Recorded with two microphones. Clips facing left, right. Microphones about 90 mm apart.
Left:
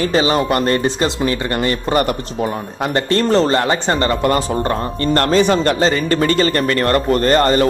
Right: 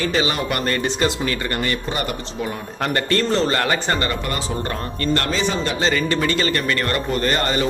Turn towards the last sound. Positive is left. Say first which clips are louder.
# left 7 dB
turn(degrees=40)  # may be behind; listen again after turning